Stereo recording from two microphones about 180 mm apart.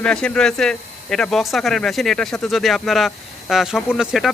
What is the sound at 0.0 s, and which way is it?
Speech, 5° left (ahead or behind).